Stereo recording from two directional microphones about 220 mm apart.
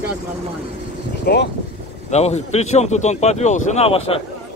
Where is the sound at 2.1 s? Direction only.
30° left (ahead or behind).